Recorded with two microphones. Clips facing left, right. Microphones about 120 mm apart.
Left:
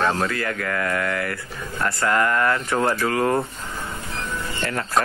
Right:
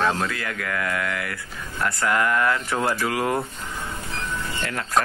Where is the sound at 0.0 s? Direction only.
Centre (ahead or behind).